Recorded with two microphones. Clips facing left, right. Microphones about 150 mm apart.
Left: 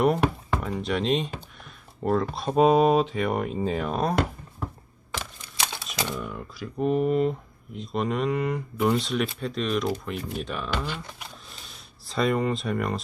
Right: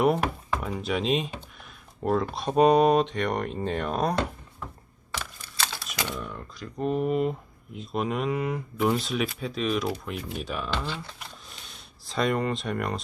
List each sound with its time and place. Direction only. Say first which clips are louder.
0.0 s speech: left 1 dB; centre (ahead or behind)
5.4 s a sound: left 1 dB; 15° left (ahead or behind)
5.8 s typewriter: left 2 dB; centre (ahead or behind)
6.1 s speech: left 3 dB; 5° left (ahead or behind)
10.8 s speech: even; 15° left (ahead or behind)
11.2 s a sound: left 1 dB; centre (ahead or behind)